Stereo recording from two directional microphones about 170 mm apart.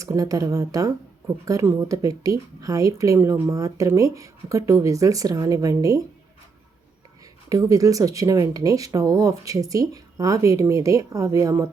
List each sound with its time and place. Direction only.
0.0 s speech: 20° right (ahead or behind)
7.5 s speech: 20° right (ahead or behind)